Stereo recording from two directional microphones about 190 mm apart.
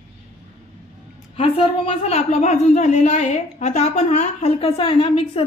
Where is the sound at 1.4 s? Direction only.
30° left (ahead or behind).